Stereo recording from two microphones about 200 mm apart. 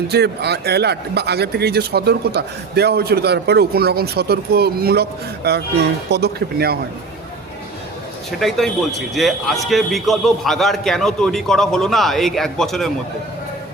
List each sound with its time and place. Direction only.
0.1 s speech: 55° right (ahead or behind)
8.4 s a man's voice: centre (ahead or behind)